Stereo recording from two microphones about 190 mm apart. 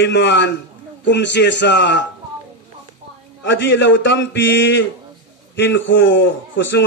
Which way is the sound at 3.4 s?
70° left (ahead or behind).